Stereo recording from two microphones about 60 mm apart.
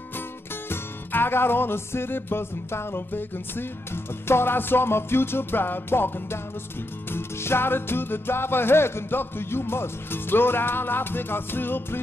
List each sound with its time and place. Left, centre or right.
0.7 s music: left